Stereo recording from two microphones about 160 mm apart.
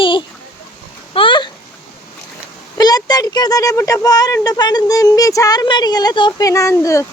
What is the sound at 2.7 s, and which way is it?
Speech, 25° left (ahead or behind).